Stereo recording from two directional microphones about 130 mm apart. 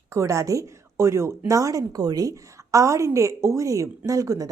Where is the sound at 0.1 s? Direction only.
25° right (ahead or behind).